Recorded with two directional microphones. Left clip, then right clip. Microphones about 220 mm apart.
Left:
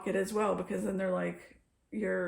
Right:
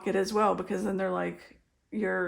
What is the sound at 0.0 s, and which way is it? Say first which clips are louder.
Speech: right 5 dB; 40° right (ahead or behind).